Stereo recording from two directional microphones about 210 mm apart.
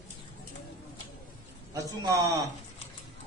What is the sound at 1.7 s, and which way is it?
Speech, 15° right (ahead or behind).